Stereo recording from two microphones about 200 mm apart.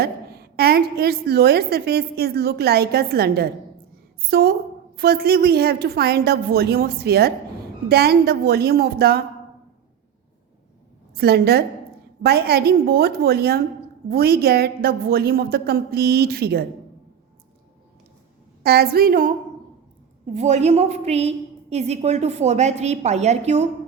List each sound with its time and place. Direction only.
0.0 s a woman's voice: 50° right (ahead or behind)
11.1 s a woman's voice: 50° right (ahead or behind)
18.6 s a woman's voice: 50° right (ahead or behind)
20.2 s a woman's voice: 35° right (ahead or behind)